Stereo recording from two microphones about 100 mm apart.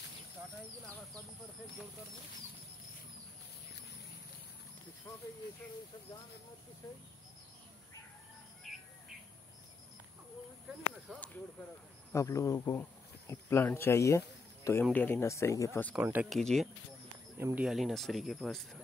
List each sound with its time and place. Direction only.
12.1 s speech: 30° left (ahead or behind)
13.3 s a sound: 25° left (ahead or behind)
13.7 s speech: 25° left (ahead or behind)
16.0 s speech: 20° right (ahead or behind)
16.3 s speech: 5° left (ahead or behind)